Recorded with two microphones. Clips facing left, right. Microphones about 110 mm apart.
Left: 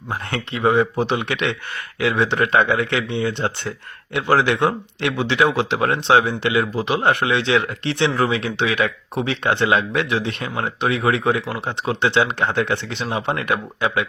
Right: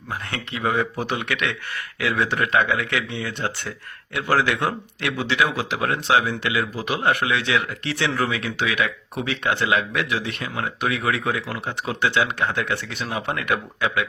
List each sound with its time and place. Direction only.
0.1 s speech: 30° left (ahead or behind)